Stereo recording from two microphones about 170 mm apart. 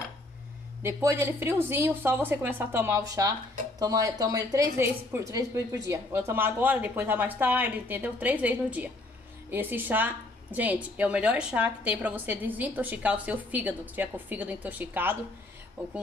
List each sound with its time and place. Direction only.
0.8 s a woman's voice: 15° right (ahead or behind)